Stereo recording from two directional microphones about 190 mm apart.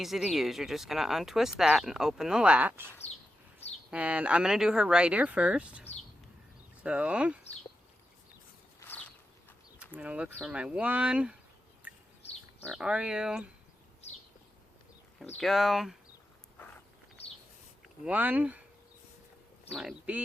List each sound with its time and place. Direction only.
0.0 s speech: centre (ahead or behind)
3.6 s a sound: 35° left (ahead or behind)
3.9 s speech: 5° right (ahead or behind)
6.8 s speech: 5° right (ahead or behind)
9.9 s speech: 5° right (ahead or behind)
11.8 s bird: 5° right (ahead or behind)
12.2 s goat: 35° left (ahead or behind)
12.6 s speech: centre (ahead or behind)
15.4 s speech: centre (ahead or behind)
17.8 s speech: 5° right (ahead or behind)
19.7 s speech: 5° right (ahead or behind)